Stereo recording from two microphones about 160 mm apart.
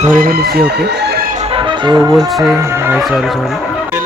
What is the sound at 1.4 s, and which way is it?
Music, 35° right (ahead or behind).